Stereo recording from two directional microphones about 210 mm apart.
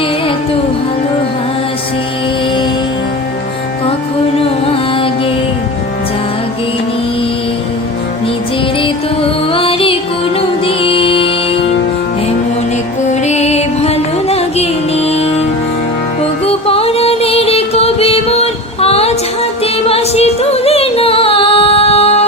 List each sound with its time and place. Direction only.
9.5 s music: 25° left (ahead or behind)
13.1 s music: 30° left (ahead or behind)
16.5 s music: 30° left (ahead or behind)